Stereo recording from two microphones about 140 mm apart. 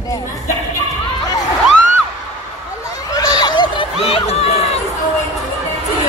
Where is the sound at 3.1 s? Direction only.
30° left (ahead or behind); by 4.7 s 45° left (ahead or behind).